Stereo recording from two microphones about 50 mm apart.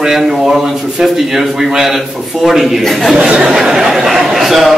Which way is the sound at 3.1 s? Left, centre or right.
Right.